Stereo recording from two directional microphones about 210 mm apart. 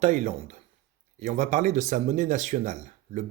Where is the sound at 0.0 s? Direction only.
35° right (ahead or behind).